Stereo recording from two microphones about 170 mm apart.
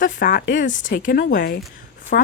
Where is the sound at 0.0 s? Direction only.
55° left (ahead or behind).